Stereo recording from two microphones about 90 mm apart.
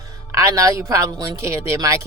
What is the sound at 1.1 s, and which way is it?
Speech, 50° right (ahead or behind).